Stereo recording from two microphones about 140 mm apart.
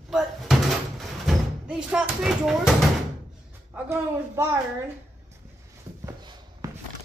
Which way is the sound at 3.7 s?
20° right (ahead or behind).